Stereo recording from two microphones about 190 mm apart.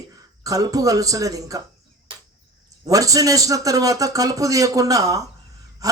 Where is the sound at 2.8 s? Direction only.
15° right (ahead or behind).